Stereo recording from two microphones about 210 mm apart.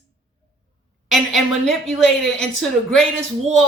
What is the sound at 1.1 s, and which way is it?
A woman's voice, centre (ahead or behind).